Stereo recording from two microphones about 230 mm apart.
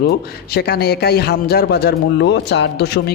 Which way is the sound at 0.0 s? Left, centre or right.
Left.